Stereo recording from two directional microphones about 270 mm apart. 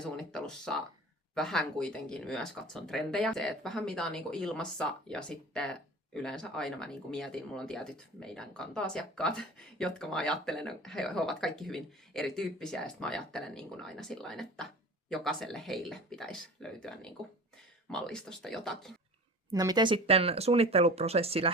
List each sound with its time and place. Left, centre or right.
0.0 s speech: centre
19.5 s speech: centre